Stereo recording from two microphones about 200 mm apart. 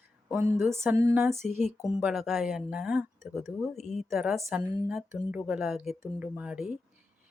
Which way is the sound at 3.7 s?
35° left (ahead or behind).